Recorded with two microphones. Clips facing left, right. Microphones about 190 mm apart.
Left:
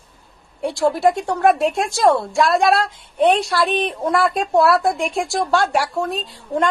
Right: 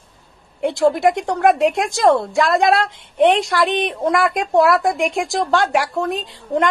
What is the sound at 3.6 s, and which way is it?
A woman's voice, 15° right (ahead or behind).